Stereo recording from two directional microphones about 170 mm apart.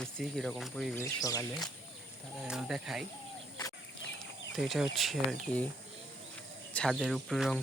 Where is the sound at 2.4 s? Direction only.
Centre (ahead or behind).